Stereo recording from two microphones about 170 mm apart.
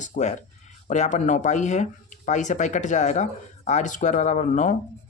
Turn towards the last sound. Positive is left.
turn(degrees=45)  # may be behind; listen again after turning